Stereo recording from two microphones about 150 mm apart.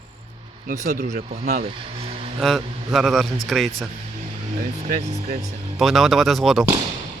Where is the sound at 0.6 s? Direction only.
55° right (ahead or behind); by 2.3 s 40° right (ahead or behind).